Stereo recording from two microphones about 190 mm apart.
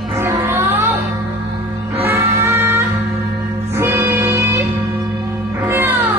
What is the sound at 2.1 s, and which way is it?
Music, 15° right (ahead or behind).